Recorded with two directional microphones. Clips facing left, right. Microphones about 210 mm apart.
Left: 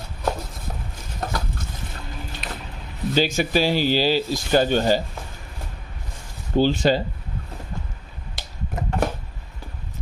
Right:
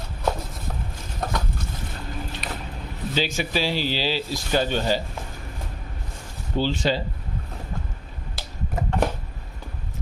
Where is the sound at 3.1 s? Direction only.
45° left (ahead or behind).